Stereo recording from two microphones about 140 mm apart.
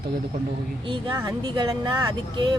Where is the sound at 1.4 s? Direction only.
30° right (ahead or behind).